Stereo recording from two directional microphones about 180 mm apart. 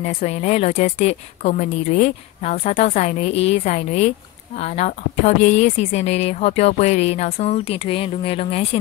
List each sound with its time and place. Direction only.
0.0 s a woman's voice: 40° left (ahead or behind)